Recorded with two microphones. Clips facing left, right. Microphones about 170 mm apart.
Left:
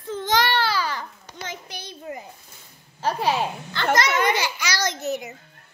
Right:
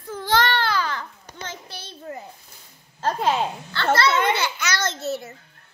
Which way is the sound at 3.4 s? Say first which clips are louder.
Right 1 dB; 15° left (ahead or behind).